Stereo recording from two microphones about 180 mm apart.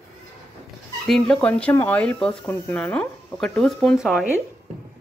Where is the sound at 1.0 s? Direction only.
5° left (ahead or behind).